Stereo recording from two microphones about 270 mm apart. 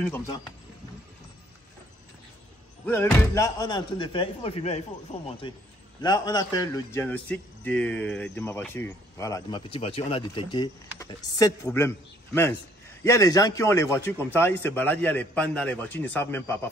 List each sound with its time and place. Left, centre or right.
2.8 s a man's voice: centre